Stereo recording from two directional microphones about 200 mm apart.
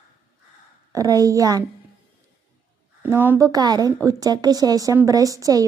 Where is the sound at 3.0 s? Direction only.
10° right (ahead or behind).